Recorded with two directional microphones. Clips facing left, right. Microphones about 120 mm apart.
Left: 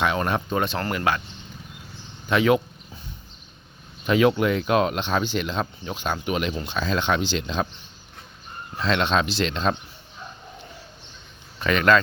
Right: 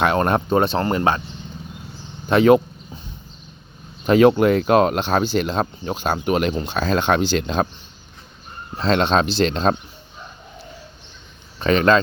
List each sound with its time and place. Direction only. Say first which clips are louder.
0.0 s speech: right 5 dB; 45° right (ahead or behind); by 1.2 s 30° right (ahead or behind)
2.3 s speech: right 6 dB; 40° right (ahead or behind)
4.0 s speech: right 6 dB; 40° right (ahead or behind)
8.8 s speech: right 5 dB; 35° right (ahead or behind)
11.6 s speech: right 3 dB; 30° right (ahead or behind)